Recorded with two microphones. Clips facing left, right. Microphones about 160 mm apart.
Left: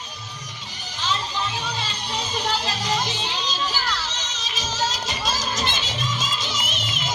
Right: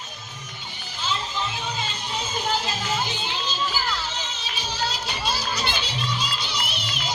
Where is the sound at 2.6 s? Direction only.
40° left (ahead or behind).